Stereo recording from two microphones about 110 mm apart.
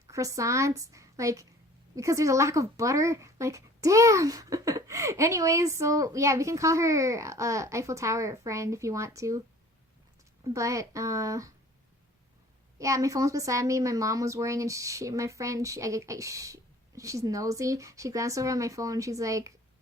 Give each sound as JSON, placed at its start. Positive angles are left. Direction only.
{"t": 0.1, "sound": "a woman's voice", "side_deg": -30}
{"t": 10.5, "sound": "speech", "side_deg": -30}
{"t": 12.8, "sound": "speech", "side_deg": -30}